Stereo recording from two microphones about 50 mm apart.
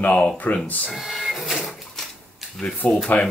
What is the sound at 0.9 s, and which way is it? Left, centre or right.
Printer, centre.